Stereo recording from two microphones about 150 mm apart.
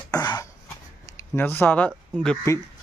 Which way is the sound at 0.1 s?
25° left (ahead or behind).